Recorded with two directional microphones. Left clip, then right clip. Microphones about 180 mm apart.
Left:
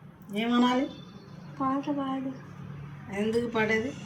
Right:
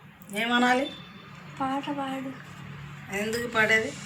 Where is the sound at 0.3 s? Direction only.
Centre (ahead or behind).